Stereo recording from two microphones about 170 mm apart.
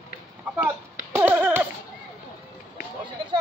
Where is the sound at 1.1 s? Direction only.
10° right (ahead or behind).